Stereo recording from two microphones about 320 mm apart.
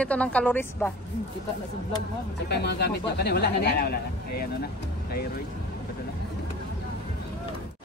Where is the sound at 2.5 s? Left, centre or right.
Left.